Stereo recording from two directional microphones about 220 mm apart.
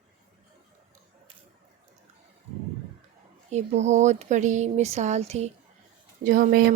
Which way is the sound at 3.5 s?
30° right (ahead or behind).